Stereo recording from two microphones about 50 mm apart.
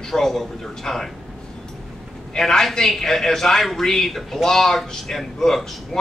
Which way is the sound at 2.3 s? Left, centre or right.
Centre.